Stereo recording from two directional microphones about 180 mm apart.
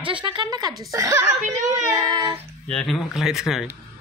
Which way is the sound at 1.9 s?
20° right (ahead or behind).